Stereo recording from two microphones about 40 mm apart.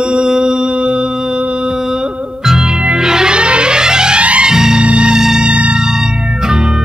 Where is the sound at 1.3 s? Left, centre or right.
Right.